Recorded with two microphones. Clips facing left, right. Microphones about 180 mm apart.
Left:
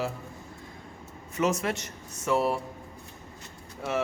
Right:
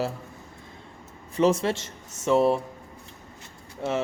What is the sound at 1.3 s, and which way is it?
A man's voice, 30° right (ahead or behind).